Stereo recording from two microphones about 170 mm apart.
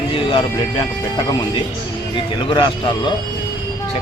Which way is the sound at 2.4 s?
25° left (ahead or behind).